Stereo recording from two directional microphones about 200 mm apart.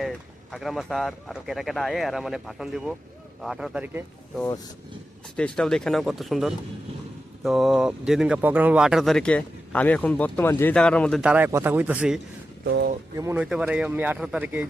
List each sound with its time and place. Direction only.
0.0 s speech: centre (ahead or behind)
5.4 s speech: 5° left (ahead or behind)
11.2 s speech: 5° right (ahead or behind)
12.6 s speech: 55° right (ahead or behind)
13.1 s speech: 10° right (ahead or behind)